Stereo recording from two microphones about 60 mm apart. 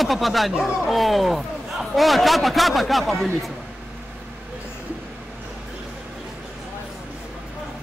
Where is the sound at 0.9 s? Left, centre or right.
Centre.